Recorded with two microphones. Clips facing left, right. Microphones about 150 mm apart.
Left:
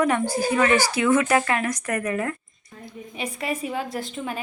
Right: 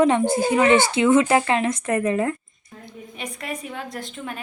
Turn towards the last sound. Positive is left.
turn(degrees=5)  # may be behind; listen again after turning